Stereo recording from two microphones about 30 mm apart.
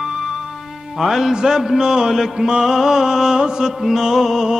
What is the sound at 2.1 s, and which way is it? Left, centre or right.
Mantra, centre.